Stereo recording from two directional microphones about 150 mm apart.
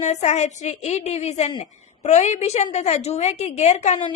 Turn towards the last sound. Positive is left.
turn(degrees=50)  # may be behind; listen again after turning